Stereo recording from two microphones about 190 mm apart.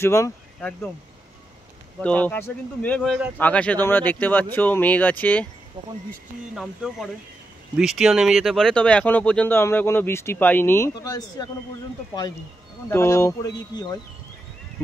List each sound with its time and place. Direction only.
0.0 s speech: 15° left (ahead or behind)
2.0 s speech: 10° left (ahead or behind)
5.8 s speech: 25° right (ahead or behind)
6.5 s speech: centre (ahead or behind); by 11.4 s 20° left (ahead or behind)
12.9 s speech: 15° left (ahead or behind)